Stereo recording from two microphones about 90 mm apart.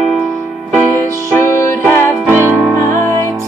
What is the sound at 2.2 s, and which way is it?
Music, 25° right (ahead or behind).